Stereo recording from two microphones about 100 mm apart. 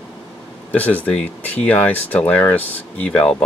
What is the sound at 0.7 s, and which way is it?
Speech, 15° left (ahead or behind).